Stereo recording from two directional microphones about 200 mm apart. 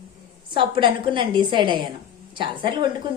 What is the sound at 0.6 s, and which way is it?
A woman's voice, 25° right (ahead or behind).